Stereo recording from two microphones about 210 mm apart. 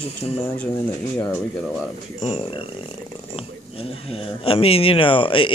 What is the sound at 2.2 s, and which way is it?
Speech, 25° left (ahead or behind).